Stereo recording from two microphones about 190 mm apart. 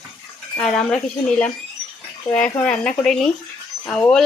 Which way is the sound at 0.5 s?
5° left (ahead or behind).